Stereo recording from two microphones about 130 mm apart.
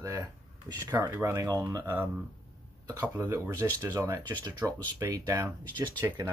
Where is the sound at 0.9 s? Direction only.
15° right (ahead or behind).